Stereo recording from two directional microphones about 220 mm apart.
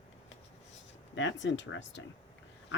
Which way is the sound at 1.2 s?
55° left (ahead or behind).